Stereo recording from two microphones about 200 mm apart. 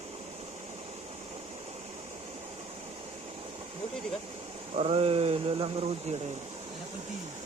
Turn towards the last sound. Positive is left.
turn(degrees=-30)  # may be behind; listen again after turning